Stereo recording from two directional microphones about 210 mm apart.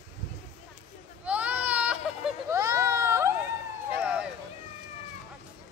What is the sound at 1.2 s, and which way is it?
Baby cry, 5° right (ahead or behind).